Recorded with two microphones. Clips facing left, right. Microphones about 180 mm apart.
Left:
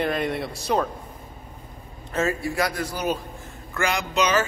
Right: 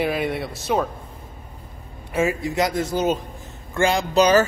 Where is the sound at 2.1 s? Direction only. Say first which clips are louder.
Right 3 dB; 15° right (ahead or behind).